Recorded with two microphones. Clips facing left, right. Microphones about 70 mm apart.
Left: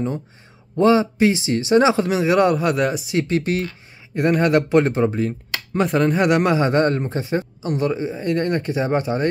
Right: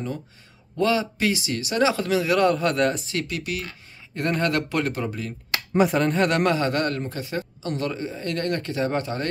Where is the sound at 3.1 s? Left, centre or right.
Left.